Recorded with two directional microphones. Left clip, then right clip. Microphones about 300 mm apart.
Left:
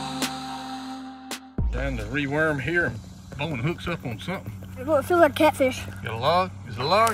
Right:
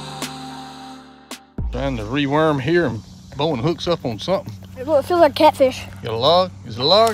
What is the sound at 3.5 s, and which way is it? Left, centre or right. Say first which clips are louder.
Speech: right 11 dB; centre.